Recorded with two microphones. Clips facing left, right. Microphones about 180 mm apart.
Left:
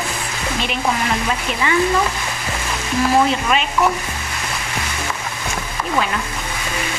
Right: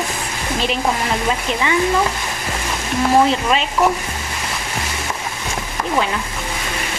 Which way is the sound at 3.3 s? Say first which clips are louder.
Right 1 dB; 30° right (ahead or behind).